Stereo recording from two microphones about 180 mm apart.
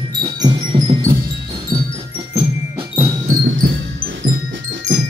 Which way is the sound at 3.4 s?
90° right.